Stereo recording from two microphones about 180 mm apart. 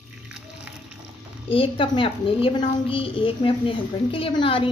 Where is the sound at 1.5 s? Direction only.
30° left (ahead or behind).